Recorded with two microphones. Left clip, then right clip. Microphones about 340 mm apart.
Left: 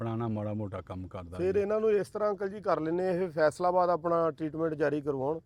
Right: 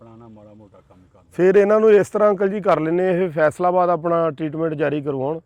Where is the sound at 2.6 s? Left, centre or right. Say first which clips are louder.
Right 9 dB; right.